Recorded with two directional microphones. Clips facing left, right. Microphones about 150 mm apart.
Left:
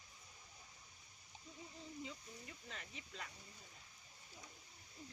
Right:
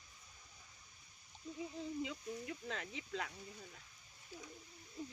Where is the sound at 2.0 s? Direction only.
90° right.